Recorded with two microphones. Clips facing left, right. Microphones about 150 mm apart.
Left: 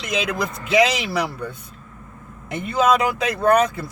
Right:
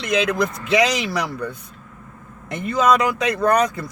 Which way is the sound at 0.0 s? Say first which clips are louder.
Right 4 dB; 5° left (ahead or behind).